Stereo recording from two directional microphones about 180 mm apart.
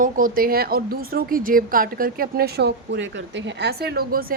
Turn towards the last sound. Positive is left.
turn(degrees=-55)  # may be behind; listen again after turning